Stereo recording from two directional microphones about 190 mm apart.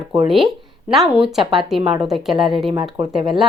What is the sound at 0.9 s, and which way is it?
Speech, centre (ahead or behind).